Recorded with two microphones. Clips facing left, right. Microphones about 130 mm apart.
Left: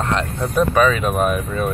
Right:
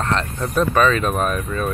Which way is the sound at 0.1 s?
10° left (ahead or behind).